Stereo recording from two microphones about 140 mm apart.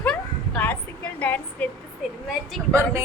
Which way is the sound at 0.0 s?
5° left (ahead or behind).